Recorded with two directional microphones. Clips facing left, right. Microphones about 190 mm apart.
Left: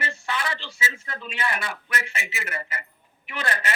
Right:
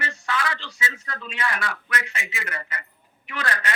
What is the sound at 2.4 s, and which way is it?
A man's voice, 25° left (ahead or behind).